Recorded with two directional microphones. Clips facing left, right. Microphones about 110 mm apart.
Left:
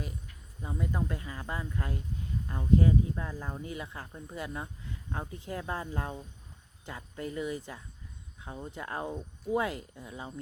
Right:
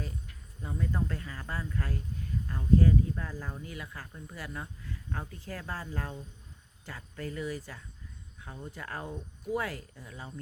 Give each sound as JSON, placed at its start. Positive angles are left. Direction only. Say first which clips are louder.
{"t": 0.6, "sound": "speech", "louder": "even", "side_deg": 15}